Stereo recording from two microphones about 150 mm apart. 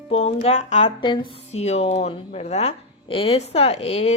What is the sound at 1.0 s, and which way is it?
Speech, 35° left (ahead or behind).